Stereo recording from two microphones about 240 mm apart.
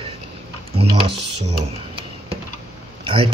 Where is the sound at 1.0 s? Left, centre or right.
Right.